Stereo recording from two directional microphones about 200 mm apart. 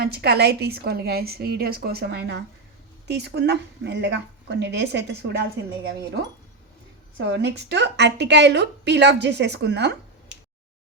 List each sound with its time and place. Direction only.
0.0 s a woman's voice: 55° right (ahead or behind)
7.3 s a woman's voice: 60° right (ahead or behind)